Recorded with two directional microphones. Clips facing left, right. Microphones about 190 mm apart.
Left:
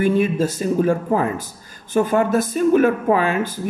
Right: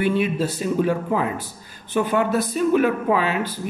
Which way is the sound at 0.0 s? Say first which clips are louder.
Left 3 dB; 45° left (ahead or behind).